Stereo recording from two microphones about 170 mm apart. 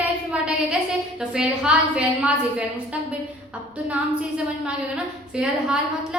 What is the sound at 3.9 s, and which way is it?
A woman's voice, 5° right (ahead or behind).